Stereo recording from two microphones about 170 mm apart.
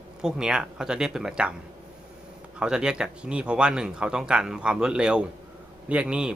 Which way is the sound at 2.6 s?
5° right (ahead or behind).